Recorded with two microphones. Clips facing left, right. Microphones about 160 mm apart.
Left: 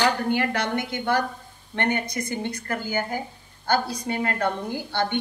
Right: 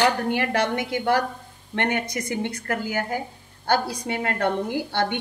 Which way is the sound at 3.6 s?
70° right (ahead or behind).